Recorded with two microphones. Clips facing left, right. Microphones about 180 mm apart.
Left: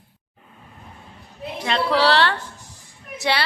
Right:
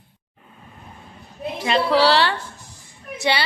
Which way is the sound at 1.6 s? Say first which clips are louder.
Right 2 dB; 5° right (ahead or behind).